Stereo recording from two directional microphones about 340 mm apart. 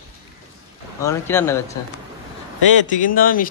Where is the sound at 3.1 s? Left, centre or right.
Left.